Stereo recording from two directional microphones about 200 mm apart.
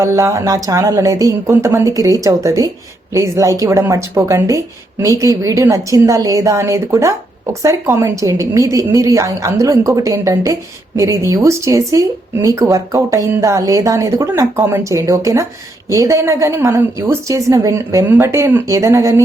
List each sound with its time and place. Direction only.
0.0 s a woman's voice: 15° right (ahead or behind)